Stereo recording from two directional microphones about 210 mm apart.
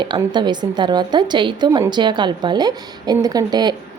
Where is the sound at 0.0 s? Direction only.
20° right (ahead or behind).